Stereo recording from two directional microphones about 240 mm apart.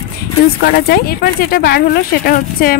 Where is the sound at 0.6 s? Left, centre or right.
Left.